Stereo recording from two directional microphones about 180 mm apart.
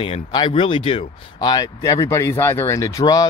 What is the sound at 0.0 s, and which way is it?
Speech, 25° left (ahead or behind).